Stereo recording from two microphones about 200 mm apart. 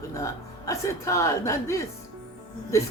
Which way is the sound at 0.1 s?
15° left (ahead or behind).